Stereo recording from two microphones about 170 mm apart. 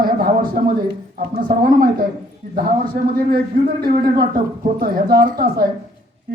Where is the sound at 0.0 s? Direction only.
60° right (ahead or behind).